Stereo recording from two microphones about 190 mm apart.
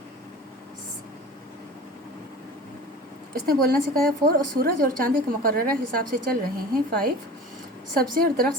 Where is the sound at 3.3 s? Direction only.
50° right (ahead or behind).